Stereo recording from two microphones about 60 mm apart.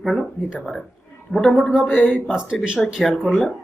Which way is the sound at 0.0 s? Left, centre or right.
Centre.